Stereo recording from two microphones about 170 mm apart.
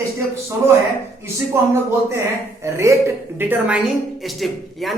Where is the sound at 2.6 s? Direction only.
15° right (ahead or behind).